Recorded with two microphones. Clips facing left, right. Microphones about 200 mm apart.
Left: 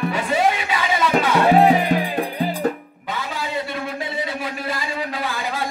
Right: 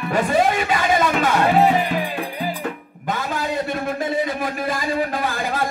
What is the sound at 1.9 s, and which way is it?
Music, 40° left (ahead or behind).